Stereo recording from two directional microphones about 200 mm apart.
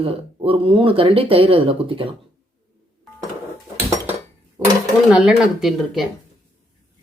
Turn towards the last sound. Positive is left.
turn(degrees=0)  # may be behind; listen again after turning